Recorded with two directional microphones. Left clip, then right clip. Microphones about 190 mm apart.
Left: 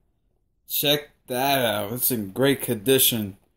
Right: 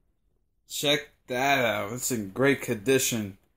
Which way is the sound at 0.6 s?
60° left (ahead or behind).